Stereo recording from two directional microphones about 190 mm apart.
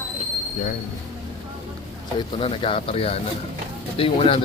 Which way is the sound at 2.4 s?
30° left (ahead or behind).